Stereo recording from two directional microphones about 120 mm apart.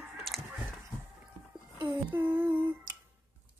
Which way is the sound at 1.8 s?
15° right (ahead or behind).